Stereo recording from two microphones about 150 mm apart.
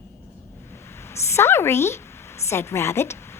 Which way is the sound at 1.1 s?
15° left (ahead or behind).